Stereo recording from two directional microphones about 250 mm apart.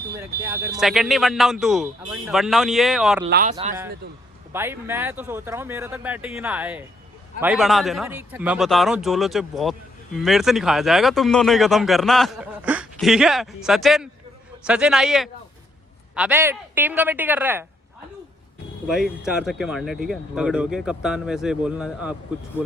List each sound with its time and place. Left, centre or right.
0.4 s speech: centre
3.2 s speech: right
4.5 s speech: centre
18.9 s speech: centre